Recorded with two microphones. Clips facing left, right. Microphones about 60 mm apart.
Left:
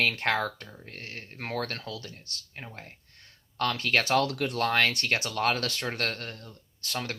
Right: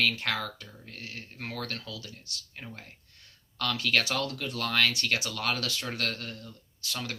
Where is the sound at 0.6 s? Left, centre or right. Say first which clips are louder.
Left 2 dB; left.